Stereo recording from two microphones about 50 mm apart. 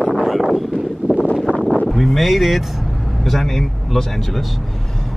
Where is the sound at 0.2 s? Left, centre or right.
Centre.